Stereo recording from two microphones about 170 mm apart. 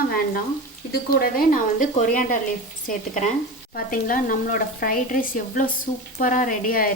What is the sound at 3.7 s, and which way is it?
Stir, 55° left (ahead or behind).